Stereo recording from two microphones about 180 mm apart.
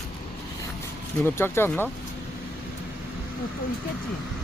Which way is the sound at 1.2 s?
10° left (ahead or behind).